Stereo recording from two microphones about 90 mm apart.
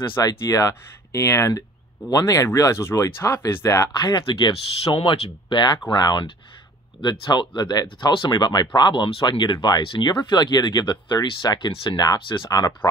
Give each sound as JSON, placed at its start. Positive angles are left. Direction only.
{"t": 0.2, "sound": "speech", "side_deg": 40}
{"t": 4.0, "sound": "speech", "side_deg": 55}
{"t": 4.9, "sound": "speech", "side_deg": 80}
{"t": 12.4, "sound": "speech", "side_deg": 45}